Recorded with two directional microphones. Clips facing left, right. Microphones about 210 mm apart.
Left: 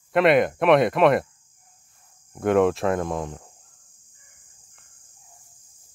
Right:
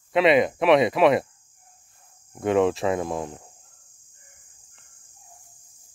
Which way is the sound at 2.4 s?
Centre (ahead or behind).